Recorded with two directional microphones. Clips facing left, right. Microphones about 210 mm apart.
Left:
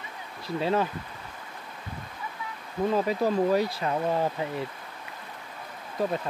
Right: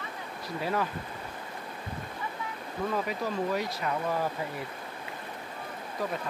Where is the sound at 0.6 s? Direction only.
25° left (ahead or behind).